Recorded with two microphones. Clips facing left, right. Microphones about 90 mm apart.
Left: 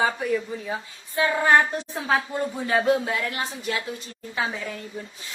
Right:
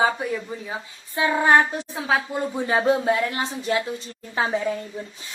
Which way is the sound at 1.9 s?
Centre (ahead or behind).